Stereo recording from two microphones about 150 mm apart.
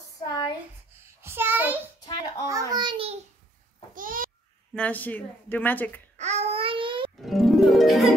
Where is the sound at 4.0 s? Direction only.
65° right (ahead or behind).